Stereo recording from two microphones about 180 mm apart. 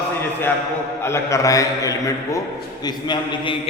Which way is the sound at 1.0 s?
15° left (ahead or behind).